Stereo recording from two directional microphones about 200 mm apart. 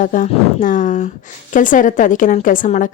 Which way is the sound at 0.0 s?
40° left (ahead or behind).